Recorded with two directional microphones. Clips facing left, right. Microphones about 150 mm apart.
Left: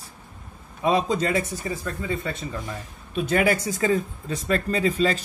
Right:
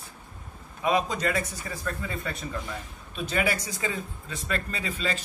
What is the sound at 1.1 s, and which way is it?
Speech, 25° left (ahead or behind).